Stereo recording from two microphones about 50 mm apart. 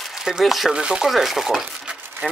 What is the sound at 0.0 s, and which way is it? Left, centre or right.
Speech, centre.